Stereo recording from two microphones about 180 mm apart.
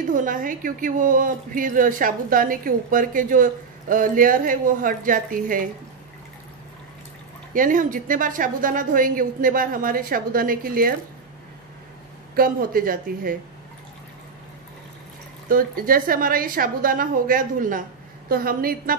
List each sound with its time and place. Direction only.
0.1 s a woman's voice: 45° right (ahead or behind)
7.5 s a woman's voice: 50° right (ahead or behind)
12.4 s a woman's voice: 55° right (ahead or behind)
15.4 s a woman's voice: 50° right (ahead or behind)